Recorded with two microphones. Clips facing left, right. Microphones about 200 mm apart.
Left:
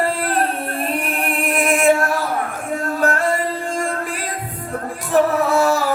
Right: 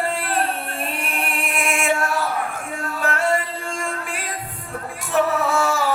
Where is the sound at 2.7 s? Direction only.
45° left (ahead or behind).